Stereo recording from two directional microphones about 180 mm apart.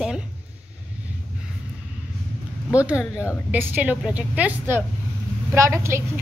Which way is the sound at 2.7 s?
5° right (ahead or behind).